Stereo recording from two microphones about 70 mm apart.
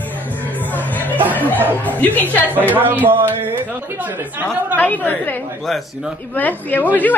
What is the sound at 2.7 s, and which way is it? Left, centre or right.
Speech, right.